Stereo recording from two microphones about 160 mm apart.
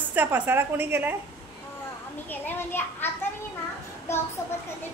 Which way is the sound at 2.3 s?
15° left (ahead or behind).